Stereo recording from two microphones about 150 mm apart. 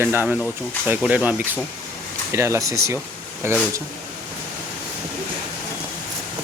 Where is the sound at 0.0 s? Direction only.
15° right (ahead or behind).